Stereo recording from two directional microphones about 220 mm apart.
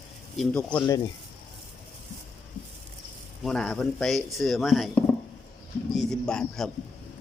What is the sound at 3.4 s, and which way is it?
A man's voice, centre (ahead or behind).